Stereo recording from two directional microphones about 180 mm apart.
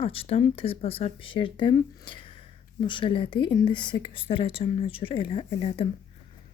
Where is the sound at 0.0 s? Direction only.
30° left (ahead or behind).